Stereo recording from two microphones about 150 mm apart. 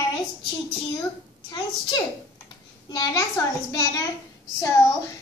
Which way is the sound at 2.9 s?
25° left (ahead or behind).